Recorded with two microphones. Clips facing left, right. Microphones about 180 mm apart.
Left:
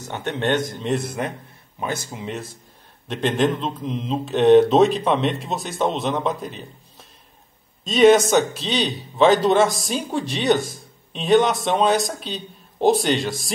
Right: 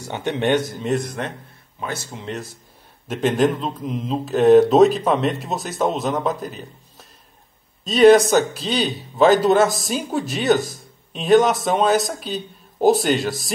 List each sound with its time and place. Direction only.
0.0 s speech: 15° right (ahead or behind); by 1.3 s 5° left (ahead or behind)
1.8 s speech: 15° left (ahead or behind)
2.0 s speech: centre (ahead or behind)